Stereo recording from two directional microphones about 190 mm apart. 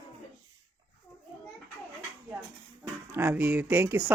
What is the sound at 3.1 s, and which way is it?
Speech, 10° right (ahead or behind).